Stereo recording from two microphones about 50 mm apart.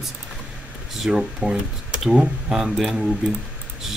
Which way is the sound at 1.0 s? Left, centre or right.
Centre.